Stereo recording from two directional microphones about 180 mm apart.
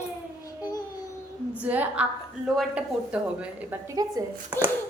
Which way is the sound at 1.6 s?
10° right (ahead or behind).